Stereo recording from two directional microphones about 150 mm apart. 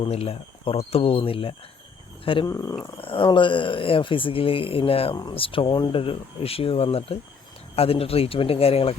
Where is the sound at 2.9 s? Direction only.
35° left (ahead or behind).